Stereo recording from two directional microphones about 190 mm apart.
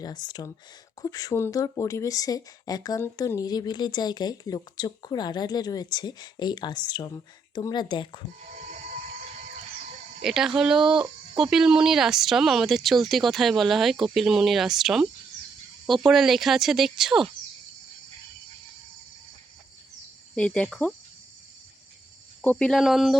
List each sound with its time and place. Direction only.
0.0 s speech: 20° left (ahead or behind)
8.4 s music: 40° right (ahead or behind)
10.2 s speech: 5° right (ahead or behind)
20.3 s speech: 5° left (ahead or behind)
22.4 s speech: 5° left (ahead or behind)